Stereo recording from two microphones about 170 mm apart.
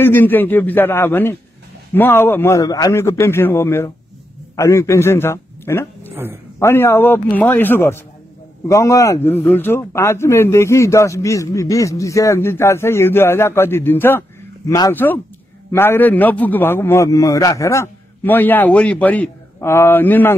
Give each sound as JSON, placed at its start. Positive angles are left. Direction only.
{"t": 0.0, "sound": "a man's voice", "side_deg": 10}
{"t": 6.1, "sound": "speech", "side_deg": -15}
{"t": 6.6, "sound": "a man's voice", "side_deg": 15}